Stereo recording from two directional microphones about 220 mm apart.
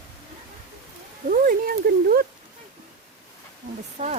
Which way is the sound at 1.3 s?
40° right (ahead or behind).